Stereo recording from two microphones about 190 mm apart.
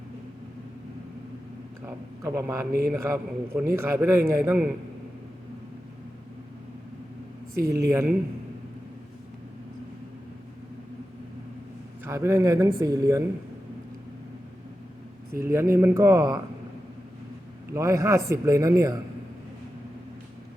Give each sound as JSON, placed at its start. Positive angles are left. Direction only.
{"t": 1.8, "sound": "a man's voice", "side_deg": -15}
{"t": 7.5, "sound": "speech", "side_deg": -55}
{"t": 7.8, "sound": "a man's voice", "side_deg": -15}
{"t": 12.0, "sound": "a man's voice", "side_deg": -15}
{"t": 15.4, "sound": "a man's voice", "side_deg": -15}
{"t": 17.7, "sound": "a man's voice", "side_deg": -15}